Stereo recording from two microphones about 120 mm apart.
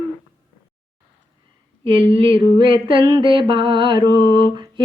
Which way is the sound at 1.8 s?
45° right (ahead or behind).